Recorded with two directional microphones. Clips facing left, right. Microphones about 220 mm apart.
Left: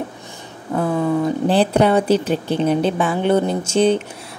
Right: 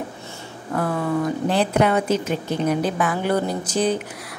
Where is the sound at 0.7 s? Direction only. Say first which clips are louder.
Left 4 dB; 20° left (ahead or behind).